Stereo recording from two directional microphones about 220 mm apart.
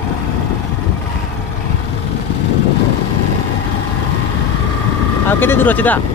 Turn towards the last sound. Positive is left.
turn(degrees=10)  # may be behind; listen again after turning